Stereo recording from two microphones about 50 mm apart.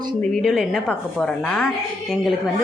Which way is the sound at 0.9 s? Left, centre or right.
Centre.